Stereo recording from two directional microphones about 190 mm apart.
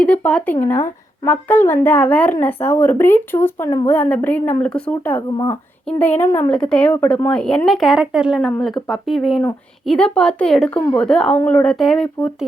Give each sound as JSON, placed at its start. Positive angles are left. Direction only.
{"t": 0.0, "sound": "a woman's voice", "side_deg": 5}